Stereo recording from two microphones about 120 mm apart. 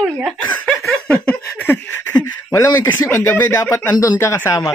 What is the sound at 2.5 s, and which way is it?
Speech, 25° left (ahead or behind).